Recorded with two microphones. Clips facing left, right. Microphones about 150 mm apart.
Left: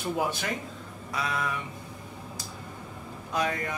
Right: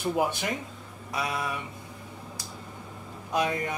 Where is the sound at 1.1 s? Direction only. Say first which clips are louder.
Even; 15° right (ahead or behind).